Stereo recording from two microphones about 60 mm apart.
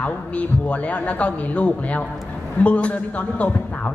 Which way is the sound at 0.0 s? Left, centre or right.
Left.